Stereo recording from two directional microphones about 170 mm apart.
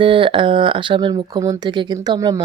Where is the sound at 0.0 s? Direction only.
30° right (ahead or behind).